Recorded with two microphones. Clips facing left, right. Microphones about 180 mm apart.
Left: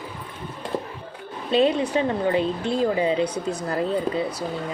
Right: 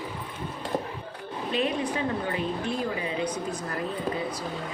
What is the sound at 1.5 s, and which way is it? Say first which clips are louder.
Speech: left 8 dB; 30° left (ahead or behind).